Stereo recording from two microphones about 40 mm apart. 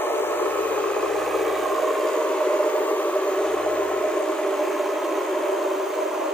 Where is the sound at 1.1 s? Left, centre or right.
Centre.